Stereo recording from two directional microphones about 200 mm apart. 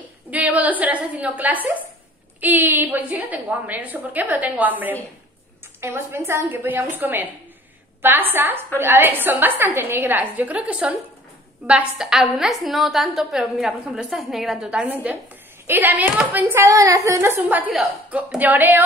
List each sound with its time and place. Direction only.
0.3 s a woman's voice: 10° right (ahead or behind)